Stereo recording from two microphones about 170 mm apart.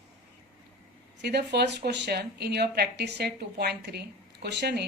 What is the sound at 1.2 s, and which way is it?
A woman's voice, 80° right.